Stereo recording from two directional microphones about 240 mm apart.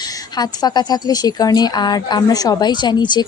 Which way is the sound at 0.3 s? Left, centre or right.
Centre.